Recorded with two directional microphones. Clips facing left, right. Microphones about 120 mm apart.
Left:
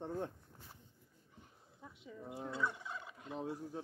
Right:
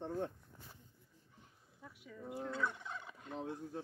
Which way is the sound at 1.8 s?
25° left (ahead or behind).